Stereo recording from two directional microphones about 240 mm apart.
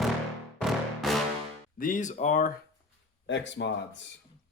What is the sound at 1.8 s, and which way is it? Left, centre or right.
Speech, left.